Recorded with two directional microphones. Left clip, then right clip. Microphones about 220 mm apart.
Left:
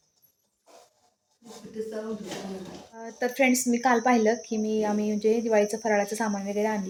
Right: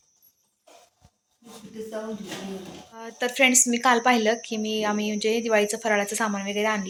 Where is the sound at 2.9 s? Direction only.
5° left (ahead or behind).